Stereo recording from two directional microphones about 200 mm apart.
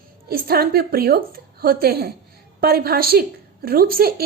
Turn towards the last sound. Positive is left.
turn(degrees=-50)  # may be behind; listen again after turning